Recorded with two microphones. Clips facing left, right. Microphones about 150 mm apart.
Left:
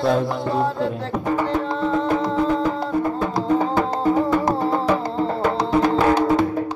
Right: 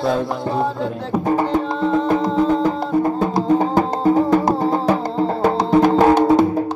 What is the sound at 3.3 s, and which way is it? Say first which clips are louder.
Music: right 3 dB; 30° right (ahead or behind).